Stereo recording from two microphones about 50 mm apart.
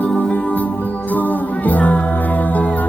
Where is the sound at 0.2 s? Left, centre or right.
Left.